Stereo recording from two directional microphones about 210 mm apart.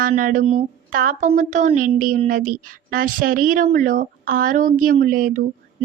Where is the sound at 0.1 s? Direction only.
40° right (ahead or behind).